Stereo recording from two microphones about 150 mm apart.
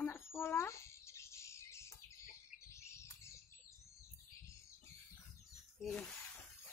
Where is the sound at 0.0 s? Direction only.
15° left (ahead or behind).